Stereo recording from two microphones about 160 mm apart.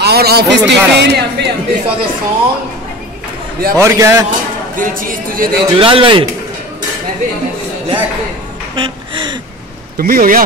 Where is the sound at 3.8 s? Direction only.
20° right (ahead or behind).